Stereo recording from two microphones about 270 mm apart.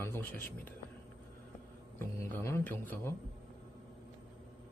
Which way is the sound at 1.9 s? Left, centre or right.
Centre.